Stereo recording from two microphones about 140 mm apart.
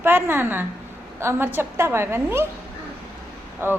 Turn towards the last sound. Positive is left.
turn(degrees=-15)  # may be behind; listen again after turning